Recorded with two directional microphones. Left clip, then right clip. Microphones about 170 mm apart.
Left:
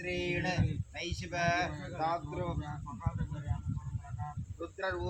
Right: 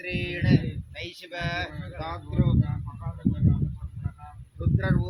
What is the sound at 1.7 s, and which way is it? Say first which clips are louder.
Speech: left 2 dB; 5° right (ahead or behind).